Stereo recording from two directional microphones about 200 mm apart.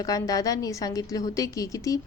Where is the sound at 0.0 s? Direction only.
20° left (ahead or behind).